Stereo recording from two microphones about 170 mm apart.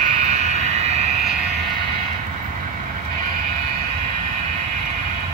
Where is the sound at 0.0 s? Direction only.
40° right (ahead or behind).